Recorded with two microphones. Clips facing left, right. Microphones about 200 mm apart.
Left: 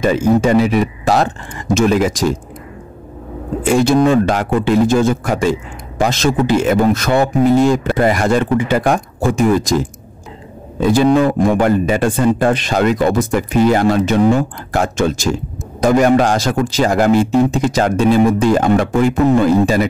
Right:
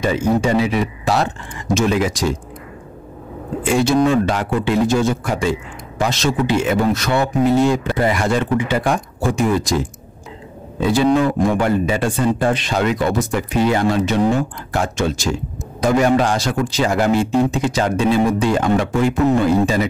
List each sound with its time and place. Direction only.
0.0 s speech: 45° left (ahead or behind)
3.8 s speech: 50° left (ahead or behind)
10.8 s speech: 50° left (ahead or behind)